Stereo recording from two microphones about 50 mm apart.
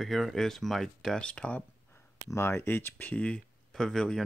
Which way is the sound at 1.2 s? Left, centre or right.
Left.